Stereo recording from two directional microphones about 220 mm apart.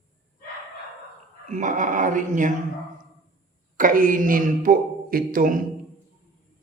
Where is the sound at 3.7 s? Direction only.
40° right (ahead or behind).